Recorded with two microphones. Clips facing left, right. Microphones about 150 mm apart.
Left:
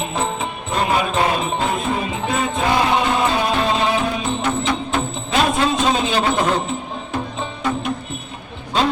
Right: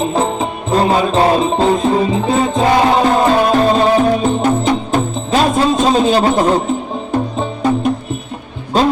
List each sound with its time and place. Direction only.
0.0 s music: 35° right (ahead or behind)
8.7 s music: 40° right (ahead or behind)